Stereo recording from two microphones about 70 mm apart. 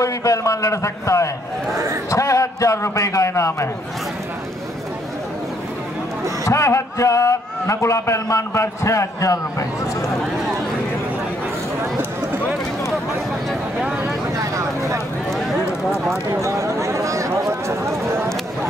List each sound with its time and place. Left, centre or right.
0.0 s a man's voice: left
6.4 s a man's voice: left
13.7 s vehicle: centre
14.3 s vehicle: right
16.3 s a sound: right